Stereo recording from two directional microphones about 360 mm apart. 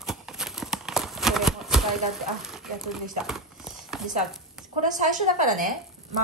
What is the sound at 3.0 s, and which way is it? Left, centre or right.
Clip-clop, centre.